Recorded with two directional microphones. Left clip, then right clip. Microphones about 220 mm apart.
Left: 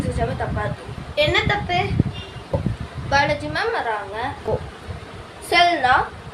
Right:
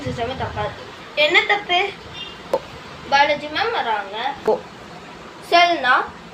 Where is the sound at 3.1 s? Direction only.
20° left (ahead or behind).